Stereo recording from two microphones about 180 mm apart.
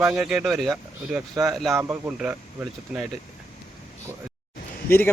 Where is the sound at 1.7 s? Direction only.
10° right (ahead or behind).